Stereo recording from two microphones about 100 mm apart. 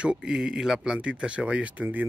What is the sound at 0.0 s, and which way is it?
Speech, 10° right (ahead or behind).